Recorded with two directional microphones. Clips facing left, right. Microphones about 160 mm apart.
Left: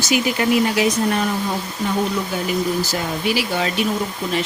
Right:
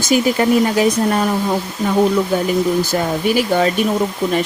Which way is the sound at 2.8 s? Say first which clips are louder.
Right 5 dB; 50° right (ahead or behind).